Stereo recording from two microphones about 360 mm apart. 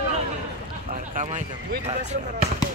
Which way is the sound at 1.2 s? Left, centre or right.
Centre.